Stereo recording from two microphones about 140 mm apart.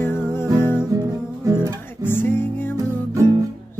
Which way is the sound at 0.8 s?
25° right (ahead or behind).